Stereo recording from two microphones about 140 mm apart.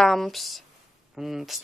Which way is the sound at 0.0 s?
Centre (ahead or behind).